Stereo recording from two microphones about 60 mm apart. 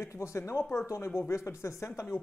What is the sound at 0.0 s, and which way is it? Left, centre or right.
Speech, left.